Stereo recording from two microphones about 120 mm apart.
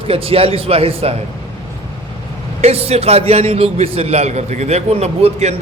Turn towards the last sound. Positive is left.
turn(degrees=-65)  # may be behind; listen again after turning